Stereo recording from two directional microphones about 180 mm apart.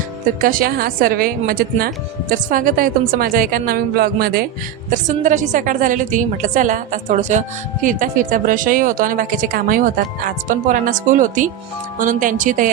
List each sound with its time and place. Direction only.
0.4 s a woman's voice: 50° right (ahead or behind)